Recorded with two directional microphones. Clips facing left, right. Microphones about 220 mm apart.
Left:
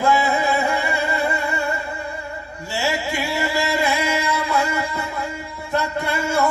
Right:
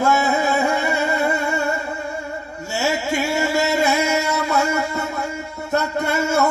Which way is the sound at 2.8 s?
45° right (ahead or behind).